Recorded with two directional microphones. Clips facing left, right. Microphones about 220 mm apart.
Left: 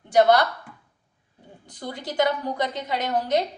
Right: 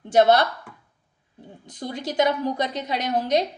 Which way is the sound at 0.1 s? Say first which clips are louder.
Right 1 dB; 25° right (ahead or behind).